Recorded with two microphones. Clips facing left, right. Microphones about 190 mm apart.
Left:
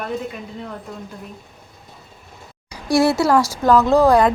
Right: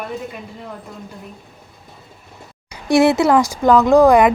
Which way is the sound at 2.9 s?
20° right (ahead or behind).